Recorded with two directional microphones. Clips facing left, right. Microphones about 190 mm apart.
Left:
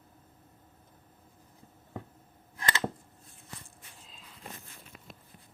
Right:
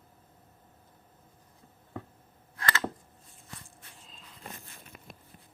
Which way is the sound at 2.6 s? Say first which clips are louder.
Even; 20° left (ahead or behind).